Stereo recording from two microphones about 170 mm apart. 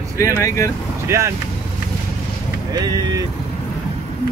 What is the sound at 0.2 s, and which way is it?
Speech, 15° left (ahead or behind).